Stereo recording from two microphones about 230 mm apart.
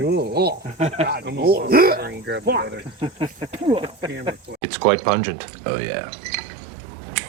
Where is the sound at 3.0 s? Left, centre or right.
Right.